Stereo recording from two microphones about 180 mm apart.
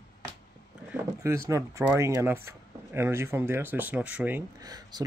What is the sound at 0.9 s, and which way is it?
Speech, 15° right (ahead or behind).